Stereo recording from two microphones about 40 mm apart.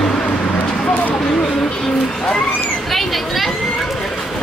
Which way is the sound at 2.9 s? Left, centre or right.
Centre.